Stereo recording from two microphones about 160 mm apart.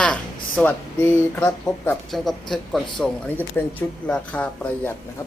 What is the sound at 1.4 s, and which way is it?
Speech, 10° left (ahead or behind).